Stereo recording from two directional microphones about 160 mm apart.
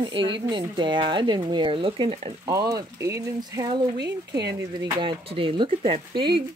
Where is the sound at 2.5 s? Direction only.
20° right (ahead or behind).